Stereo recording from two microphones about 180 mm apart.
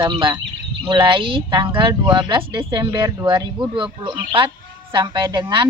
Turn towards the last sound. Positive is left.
turn(degrees=-25)  # may be behind; listen again after turning